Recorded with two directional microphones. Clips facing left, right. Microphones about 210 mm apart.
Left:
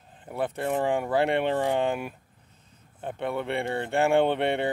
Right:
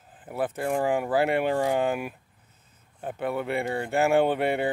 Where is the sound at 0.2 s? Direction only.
5° right (ahead or behind).